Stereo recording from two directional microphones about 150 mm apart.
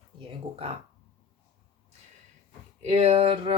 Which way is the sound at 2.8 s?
45° right (ahead or behind).